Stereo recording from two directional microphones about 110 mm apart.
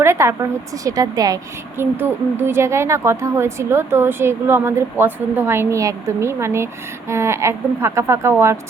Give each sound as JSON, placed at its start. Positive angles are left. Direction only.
{"t": 0.0, "sound": "a woman's voice", "side_deg": -25}
{"t": 1.8, "sound": "a woman's voice", "side_deg": -20}